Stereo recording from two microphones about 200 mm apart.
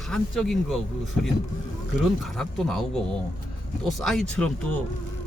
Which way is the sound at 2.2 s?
Centre (ahead or behind).